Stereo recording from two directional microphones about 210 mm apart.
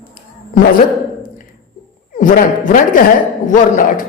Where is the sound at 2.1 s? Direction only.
40° left (ahead or behind).